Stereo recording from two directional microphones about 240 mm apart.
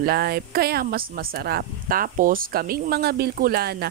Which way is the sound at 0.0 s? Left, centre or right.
Right.